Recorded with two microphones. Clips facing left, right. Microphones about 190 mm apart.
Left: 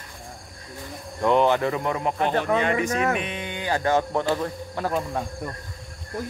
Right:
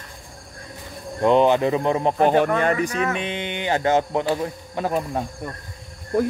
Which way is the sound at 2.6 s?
40° right (ahead or behind).